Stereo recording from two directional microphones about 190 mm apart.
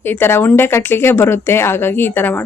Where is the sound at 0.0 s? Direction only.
10° left (ahead or behind).